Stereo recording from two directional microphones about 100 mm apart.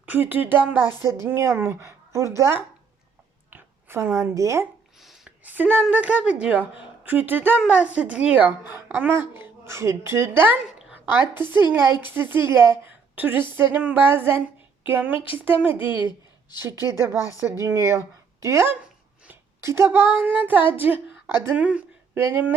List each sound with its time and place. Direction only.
0.0 s a woman's voice: 20° right (ahead or behind)
4.9 s a sound: centre (ahead or behind)
5.4 s a woman's voice: 15° right (ahead or behind)
12.8 s a sound: 20° right (ahead or behind)
13.5 s a woman's voice: 20° right (ahead or behind)
15.8 s speech: 55° left (ahead or behind)
16.9 s a woman's voice: 25° right (ahead or behind)
17.2 s speech: 35° left (ahead or behind)
17.4 s a woman's voice: 25° right (ahead or behind)